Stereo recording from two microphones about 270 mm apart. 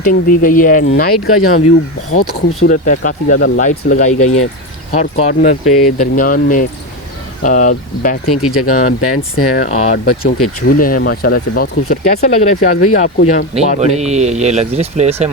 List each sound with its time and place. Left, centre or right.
0.0 s speech: left
1.1 s speech: left
2.6 s speech: left
8.3 s speech: left
9.6 s speech: left
10.1 s speech: left
10.7 s speech: left
13.7 s speech: right